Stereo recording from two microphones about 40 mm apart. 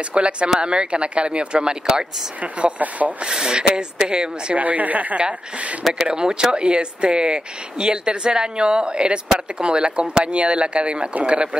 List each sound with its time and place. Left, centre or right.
0.1 s speech: right
2.4 s speech: right
3.3 s speech: centre
4.6 s speech: right
6.1 s speech: right